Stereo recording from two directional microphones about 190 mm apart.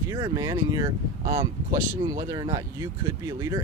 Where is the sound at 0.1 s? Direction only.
20° right (ahead or behind).